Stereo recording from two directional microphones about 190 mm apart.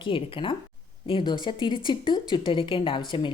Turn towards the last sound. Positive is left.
turn(degrees=25)  # may be behind; listen again after turning